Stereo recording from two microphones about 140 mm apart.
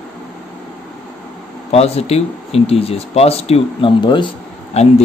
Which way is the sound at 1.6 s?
50° left (ahead or behind).